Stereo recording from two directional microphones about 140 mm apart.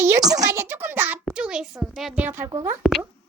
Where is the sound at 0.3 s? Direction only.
20° right (ahead or behind).